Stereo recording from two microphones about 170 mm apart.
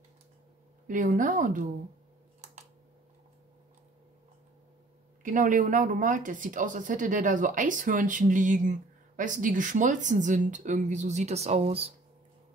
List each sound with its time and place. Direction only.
0.8 s speech: 50° right (ahead or behind)
2.4 s a sound: 40° right (ahead or behind)
5.2 s speech: 50° right (ahead or behind)